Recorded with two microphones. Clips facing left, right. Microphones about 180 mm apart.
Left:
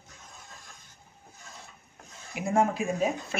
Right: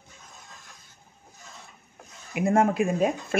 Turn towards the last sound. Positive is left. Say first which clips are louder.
# right 4 dB
turn(degrees=-60)  # may be behind; listen again after turning